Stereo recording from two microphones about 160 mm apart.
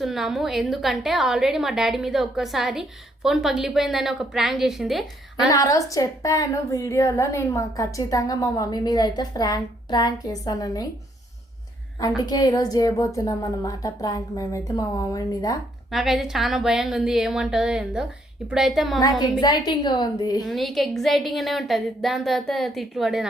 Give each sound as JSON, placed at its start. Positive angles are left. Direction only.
{"t": 0.0, "sound": "a woman's voice", "side_deg": 0}
{"t": 5.5, "sound": "a woman's voice", "side_deg": 20}
{"t": 12.2, "sound": "a woman's voice", "side_deg": 25}
{"t": 15.9, "sound": "a woman's voice", "side_deg": 0}
{"t": 19.4, "sound": "a woman's voice", "side_deg": 25}
{"t": 20.4, "sound": "a woman's voice", "side_deg": 0}